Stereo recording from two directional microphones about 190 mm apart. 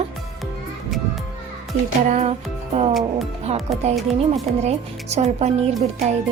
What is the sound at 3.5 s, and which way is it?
Speech, 35° right (ahead or behind).